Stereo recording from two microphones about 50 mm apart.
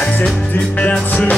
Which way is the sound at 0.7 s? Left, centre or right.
Left.